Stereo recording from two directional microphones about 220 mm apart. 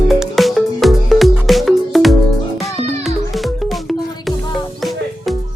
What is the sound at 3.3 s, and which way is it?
Music, centre (ahead or behind).